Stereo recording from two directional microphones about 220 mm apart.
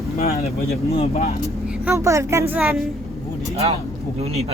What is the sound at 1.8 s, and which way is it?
Speech, 15° right (ahead or behind).